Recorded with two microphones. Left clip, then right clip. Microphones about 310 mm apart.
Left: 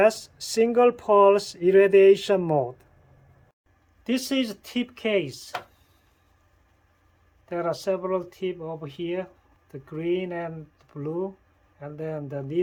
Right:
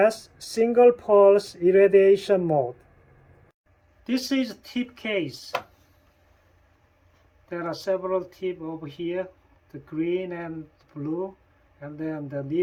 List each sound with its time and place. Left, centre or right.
0.0 s speech: left
4.0 s speech: left
7.4 s speech: left
11.8 s speech: left